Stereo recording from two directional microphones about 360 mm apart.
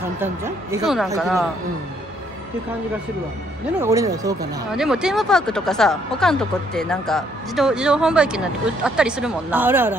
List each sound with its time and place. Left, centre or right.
0.2 s speech: centre
3.8 s speech: centre